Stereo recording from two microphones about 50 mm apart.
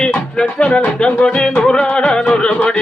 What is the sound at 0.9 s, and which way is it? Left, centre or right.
Music, centre.